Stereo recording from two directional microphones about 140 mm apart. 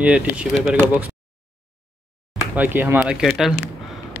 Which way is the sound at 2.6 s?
15° right (ahead or behind).